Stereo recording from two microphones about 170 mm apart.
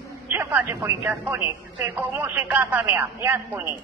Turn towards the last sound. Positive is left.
turn(degrees=-10)  # may be behind; listen again after turning